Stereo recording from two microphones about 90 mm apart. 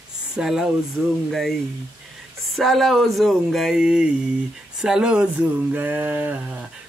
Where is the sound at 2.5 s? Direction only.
Centre (ahead or behind); by 6.6 s 20° right (ahead or behind).